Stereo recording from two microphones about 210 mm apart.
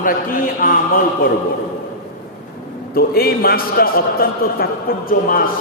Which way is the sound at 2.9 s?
45° left (ahead or behind).